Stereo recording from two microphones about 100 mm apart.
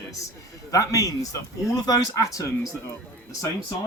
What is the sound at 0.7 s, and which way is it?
Speech, 35° left (ahead or behind).